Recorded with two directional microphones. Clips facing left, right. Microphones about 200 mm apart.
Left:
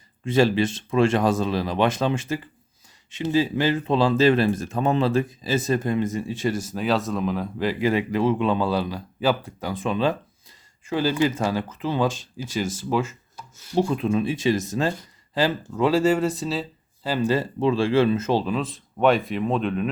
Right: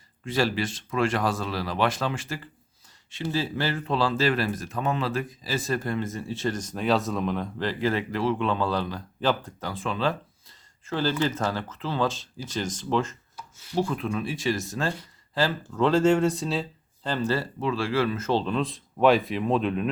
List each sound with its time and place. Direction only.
0.3 s speech: 20° left (ahead or behind)
13.7 s speech: 25° left (ahead or behind); by 19.9 s centre (ahead or behind)